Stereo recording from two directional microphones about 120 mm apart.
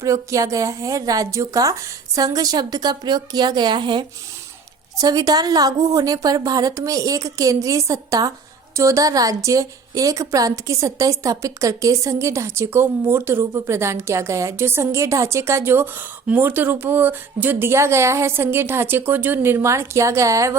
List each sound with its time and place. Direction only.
0.0 s a woman's voice: 25° right (ahead or behind)